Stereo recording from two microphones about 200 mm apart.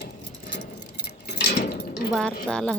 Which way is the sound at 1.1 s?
55° left (ahead or behind).